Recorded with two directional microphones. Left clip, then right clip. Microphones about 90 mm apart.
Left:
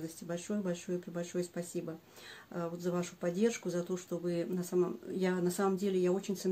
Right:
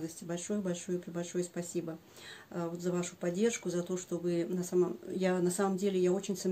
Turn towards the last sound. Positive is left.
turn(degrees=-25)  # may be behind; listen again after turning